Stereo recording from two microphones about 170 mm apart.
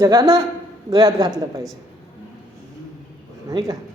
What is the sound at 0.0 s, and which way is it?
A woman's voice, 25° right (ahead or behind).